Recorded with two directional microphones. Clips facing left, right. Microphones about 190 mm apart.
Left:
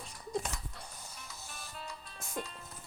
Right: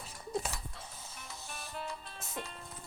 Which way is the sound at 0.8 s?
Centre (ahead or behind).